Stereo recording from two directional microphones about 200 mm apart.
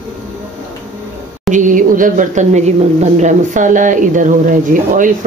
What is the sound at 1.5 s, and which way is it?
Speech, 40° right (ahead or behind).